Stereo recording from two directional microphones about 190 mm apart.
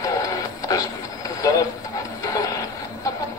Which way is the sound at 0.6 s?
20° left (ahead or behind).